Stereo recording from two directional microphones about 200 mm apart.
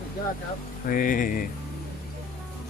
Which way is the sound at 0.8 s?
45° left (ahead or behind).